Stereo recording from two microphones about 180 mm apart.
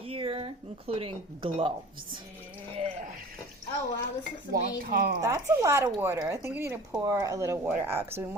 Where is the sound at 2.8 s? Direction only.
40° right (ahead or behind).